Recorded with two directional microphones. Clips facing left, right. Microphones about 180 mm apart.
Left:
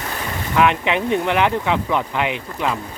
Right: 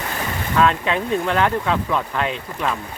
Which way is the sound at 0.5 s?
15° left (ahead or behind).